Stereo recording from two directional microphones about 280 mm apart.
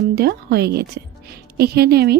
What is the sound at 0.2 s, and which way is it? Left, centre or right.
A woman's voice, right.